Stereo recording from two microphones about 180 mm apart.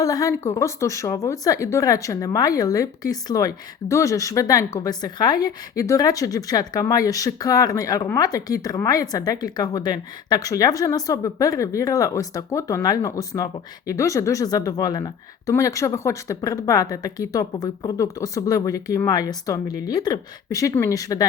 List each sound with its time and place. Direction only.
0.0 s speech: 20° left (ahead or behind)